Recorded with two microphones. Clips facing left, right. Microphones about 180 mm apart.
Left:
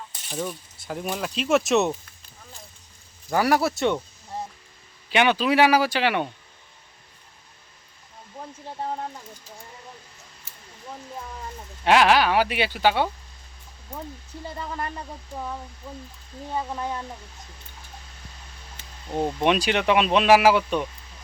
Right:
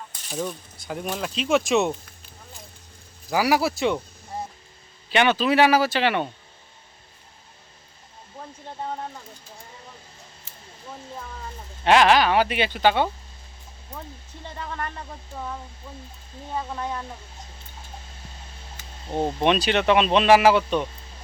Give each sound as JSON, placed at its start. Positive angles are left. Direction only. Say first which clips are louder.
{"t": 0.3, "sound": "speech", "louder": "right 1 dB", "side_deg": 0}
{"t": 3.2, "sound": "speech", "louder": "even", "side_deg": -5}
{"t": 5.1, "sound": "speech", "louder": "even", "side_deg": 10}
{"t": 11.9, "sound": "speech", "louder": "right 1 dB", "side_deg": 10}
{"t": 14.6, "sound": "speech", "louder": "even", "side_deg": 10}
{"t": 19.0, "sound": "speech", "louder": "right 1 dB", "side_deg": -25}
{"t": 19.5, "sound": "speech", "louder": "right 1 dB", "side_deg": 10}